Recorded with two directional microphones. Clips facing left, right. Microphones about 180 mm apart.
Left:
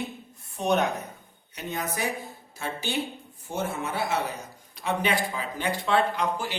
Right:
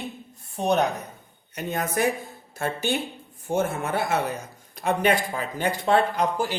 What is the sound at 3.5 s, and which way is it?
Speech, 50° right (ahead or behind).